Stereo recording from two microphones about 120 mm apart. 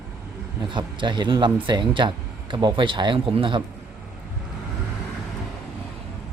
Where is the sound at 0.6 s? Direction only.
40° right (ahead or behind).